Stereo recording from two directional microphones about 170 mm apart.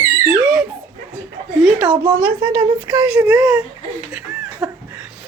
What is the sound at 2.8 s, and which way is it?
Speech, 10° right (ahead or behind).